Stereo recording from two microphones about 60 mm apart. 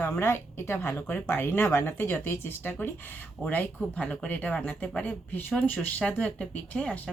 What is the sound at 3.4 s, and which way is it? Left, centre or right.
Speech, left.